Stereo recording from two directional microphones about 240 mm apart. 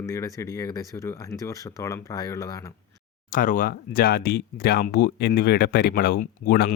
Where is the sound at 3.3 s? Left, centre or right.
Left.